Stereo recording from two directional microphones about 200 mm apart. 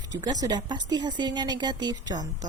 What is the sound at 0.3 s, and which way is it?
Speech, 20° right (ahead or behind).